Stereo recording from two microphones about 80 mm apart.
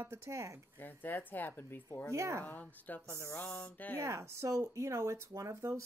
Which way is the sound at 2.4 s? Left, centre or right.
Centre.